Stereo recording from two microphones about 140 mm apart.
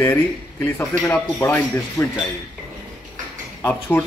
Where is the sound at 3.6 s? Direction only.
10° left (ahead or behind).